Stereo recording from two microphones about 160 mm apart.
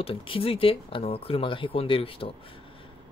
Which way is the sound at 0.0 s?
35° left (ahead or behind).